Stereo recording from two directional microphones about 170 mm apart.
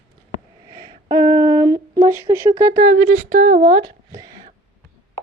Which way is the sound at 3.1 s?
60° right (ahead or behind).